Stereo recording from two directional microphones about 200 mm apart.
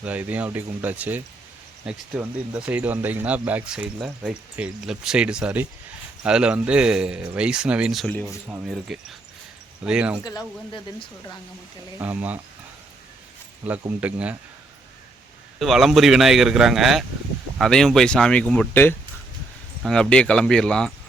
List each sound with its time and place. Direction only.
0.0 s a man's voice: 5° right (ahead or behind)
11.9 s speech: 10° right (ahead or behind)
13.6 s a man's voice: 5° right (ahead or behind)
15.5 s a man's voice: centre (ahead or behind)